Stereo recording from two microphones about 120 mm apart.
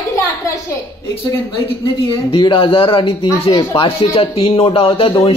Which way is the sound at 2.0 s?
45° left (ahead or behind).